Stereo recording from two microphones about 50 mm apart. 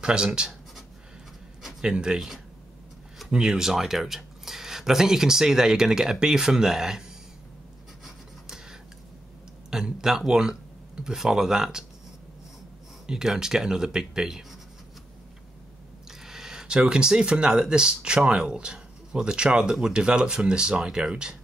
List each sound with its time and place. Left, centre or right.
0.0 s speech: centre
1.8 s speech: centre
8.0 s writing: centre
9.7 s a sound: centre
11.1 s speech: centre
13.0 s speech: centre
16.1 s speech: centre